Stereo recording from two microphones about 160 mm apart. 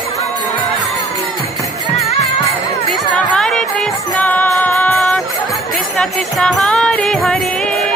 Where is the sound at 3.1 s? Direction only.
5° left (ahead or behind).